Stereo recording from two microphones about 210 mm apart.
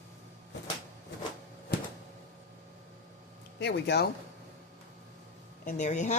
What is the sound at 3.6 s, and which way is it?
Speech, 55° left (ahead or behind).